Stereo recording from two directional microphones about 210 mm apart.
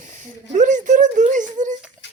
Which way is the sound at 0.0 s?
35° right (ahead or behind).